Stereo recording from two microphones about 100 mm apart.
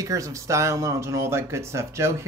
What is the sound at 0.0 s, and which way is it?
Speech, 35° right (ahead or behind).